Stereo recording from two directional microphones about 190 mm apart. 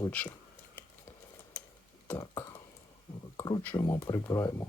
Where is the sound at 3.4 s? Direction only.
20° left (ahead or behind).